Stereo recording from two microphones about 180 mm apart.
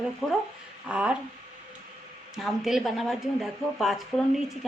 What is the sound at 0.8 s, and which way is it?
Speech, 5° right (ahead or behind).